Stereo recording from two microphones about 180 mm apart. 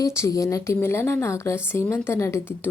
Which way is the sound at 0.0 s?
15° left (ahead or behind).